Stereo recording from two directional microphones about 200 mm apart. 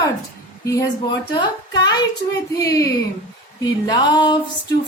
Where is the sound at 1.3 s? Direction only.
20° left (ahead or behind).